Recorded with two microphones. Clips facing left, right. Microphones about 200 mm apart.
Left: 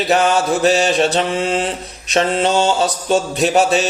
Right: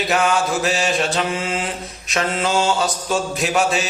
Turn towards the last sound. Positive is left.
turn(degrees=35)  # may be behind; listen again after turning